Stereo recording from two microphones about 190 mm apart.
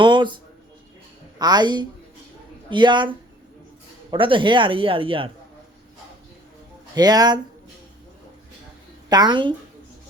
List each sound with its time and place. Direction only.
0.0 s a sound: 25° right (ahead or behind)
1.4 s speech: 20° right (ahead or behind)
6.9 s speech: 20° right (ahead or behind)
9.0 s speech: 20° right (ahead or behind)